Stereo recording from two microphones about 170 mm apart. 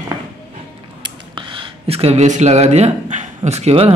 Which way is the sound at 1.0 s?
30° right (ahead or behind).